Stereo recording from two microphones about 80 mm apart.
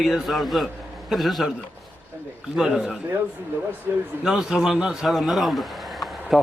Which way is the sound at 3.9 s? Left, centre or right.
Right.